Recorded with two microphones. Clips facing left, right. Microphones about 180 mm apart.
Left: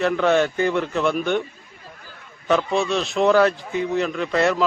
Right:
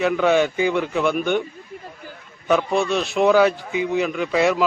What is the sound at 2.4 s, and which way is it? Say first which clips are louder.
Speech: right 1 dB; centre (ahead or behind).